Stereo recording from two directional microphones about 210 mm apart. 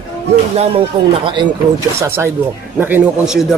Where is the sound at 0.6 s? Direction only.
25° right (ahead or behind).